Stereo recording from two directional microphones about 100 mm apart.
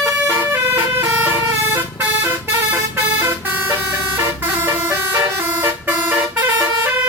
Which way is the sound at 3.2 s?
20° right (ahead or behind).